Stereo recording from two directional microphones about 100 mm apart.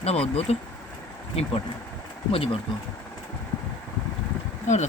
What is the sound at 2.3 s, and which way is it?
Speech, 70° left (ahead or behind).